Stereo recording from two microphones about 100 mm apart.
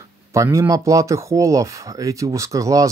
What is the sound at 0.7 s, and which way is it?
Speech, 35° right (ahead or behind).